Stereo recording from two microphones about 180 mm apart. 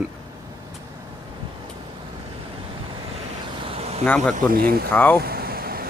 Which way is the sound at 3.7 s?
35° right (ahead or behind).